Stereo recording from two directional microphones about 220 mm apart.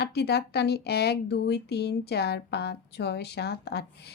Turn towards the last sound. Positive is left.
turn(degrees=50)  # may be behind; listen again after turning